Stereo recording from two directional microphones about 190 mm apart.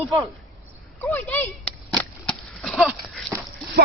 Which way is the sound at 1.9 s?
5° left (ahead or behind).